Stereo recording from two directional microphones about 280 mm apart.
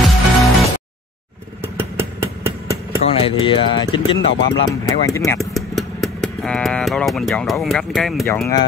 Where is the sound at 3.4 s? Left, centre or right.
Centre.